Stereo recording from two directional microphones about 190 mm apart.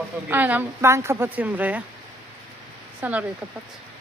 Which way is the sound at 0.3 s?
10° right (ahead or behind).